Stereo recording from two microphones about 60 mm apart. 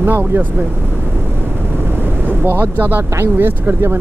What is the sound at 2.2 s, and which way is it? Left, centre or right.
Speech, right.